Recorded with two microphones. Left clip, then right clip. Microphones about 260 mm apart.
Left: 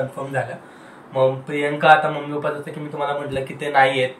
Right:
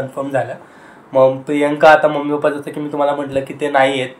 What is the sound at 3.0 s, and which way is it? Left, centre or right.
A man's voice, centre.